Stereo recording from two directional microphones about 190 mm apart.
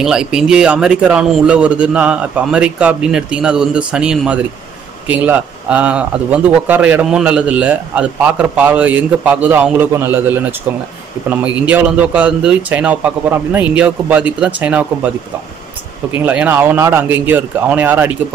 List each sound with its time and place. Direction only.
0.0 s a man's voice: 5° right (ahead or behind)
16.3 s a man's voice: 10° right (ahead or behind)